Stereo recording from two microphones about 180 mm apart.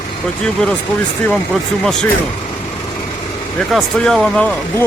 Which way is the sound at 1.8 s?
5° left (ahead or behind).